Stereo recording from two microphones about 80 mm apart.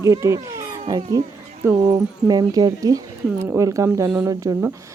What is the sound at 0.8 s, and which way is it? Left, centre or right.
Speech, right.